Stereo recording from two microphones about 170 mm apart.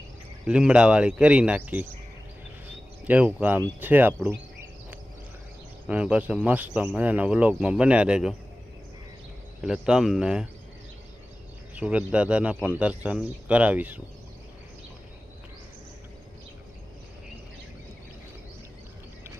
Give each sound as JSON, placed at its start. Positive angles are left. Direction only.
{"t": 0.4, "sound": "speech", "side_deg": -5}
{"t": 3.0, "sound": "speech", "side_deg": -10}
{"t": 5.9, "sound": "speech", "side_deg": -10}
{"t": 9.6, "sound": "speech", "side_deg": -5}
{"t": 11.7, "sound": "speech", "side_deg": -10}